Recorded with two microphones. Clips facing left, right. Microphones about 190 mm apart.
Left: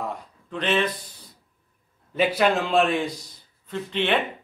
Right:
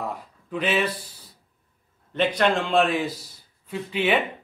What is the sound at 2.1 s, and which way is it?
A man's voice, 5° left (ahead or behind).